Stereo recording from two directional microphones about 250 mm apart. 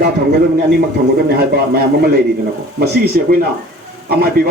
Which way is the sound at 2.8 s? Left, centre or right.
Right.